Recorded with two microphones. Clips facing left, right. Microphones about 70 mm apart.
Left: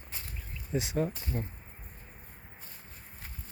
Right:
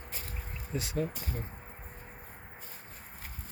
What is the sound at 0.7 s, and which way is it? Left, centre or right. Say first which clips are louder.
Speech: left 3 dB; left.